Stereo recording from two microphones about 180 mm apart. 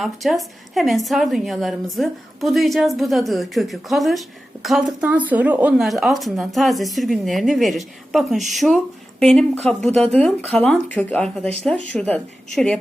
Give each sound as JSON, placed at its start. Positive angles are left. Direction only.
{"t": 0.0, "sound": "a woman's voice", "side_deg": 0}